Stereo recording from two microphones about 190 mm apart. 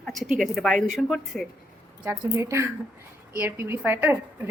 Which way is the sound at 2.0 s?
15° right (ahead or behind).